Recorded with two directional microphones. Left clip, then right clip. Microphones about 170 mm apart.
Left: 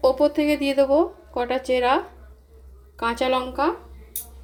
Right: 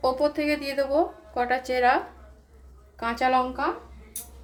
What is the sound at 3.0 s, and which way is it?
Speech, 65° left (ahead or behind).